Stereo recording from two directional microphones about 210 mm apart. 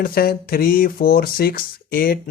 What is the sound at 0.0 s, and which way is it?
Speech, 45° left (ahead or behind).